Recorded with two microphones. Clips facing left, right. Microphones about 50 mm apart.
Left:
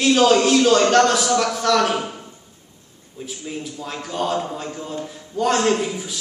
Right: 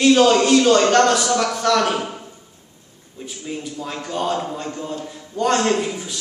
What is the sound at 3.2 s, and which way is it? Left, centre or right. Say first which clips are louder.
A man's voice: right 1 dB; centre.